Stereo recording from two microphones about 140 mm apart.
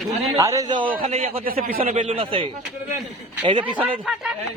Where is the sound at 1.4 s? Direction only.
90° right.